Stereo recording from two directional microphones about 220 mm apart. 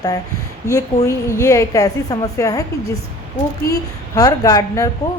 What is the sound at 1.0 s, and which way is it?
A woman's voice, 15° left (ahead or behind).